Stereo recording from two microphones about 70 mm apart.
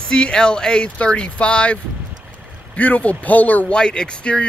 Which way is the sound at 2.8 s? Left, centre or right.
Left.